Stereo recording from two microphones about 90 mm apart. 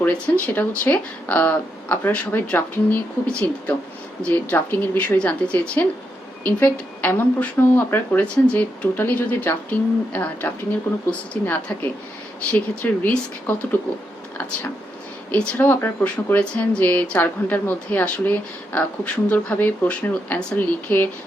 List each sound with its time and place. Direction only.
0.0 s a woman's voice: 20° left (ahead or behind)
15.3 s a woman's voice: 20° left (ahead or behind)